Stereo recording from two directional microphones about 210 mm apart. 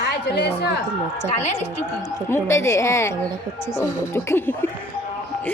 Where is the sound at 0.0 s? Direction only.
55° left (ahead or behind).